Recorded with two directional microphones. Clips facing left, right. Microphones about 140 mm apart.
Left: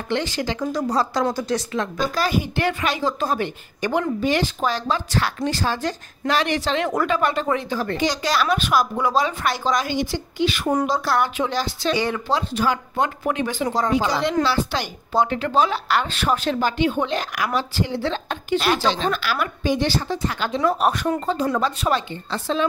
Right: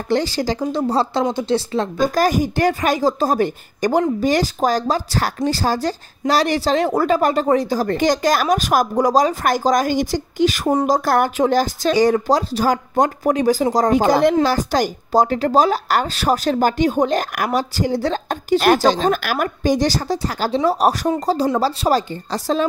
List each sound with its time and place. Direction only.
0.1 s speech: 35° right (ahead or behind)
2.1 s speech: 45° right (ahead or behind)